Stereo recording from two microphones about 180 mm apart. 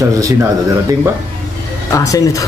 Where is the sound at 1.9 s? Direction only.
20° left (ahead or behind).